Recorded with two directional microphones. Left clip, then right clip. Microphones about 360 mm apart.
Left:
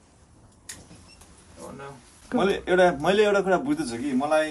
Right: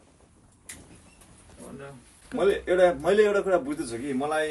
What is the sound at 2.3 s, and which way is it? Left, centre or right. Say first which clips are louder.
A man's voice: left 1 dB; centre.